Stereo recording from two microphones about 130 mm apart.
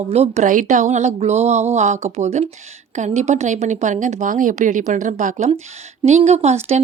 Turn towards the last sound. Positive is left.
turn(degrees=-55)  # may be behind; listen again after turning